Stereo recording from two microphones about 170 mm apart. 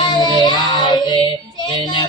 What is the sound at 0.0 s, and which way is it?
Child singing, 25° left (ahead or behind).